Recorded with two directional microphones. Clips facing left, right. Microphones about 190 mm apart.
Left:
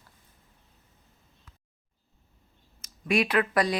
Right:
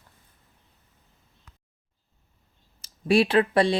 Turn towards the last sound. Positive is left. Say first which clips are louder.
# right 4 dB
turn(degrees=-30)  # may be behind; listen again after turning